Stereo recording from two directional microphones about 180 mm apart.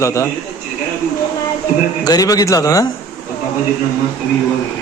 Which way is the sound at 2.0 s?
20° left (ahead or behind).